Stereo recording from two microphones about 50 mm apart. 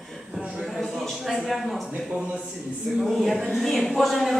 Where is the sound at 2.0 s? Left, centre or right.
Centre.